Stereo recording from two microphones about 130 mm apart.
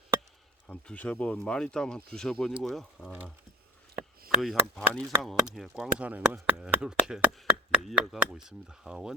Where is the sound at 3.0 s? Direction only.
15° left (ahead or behind).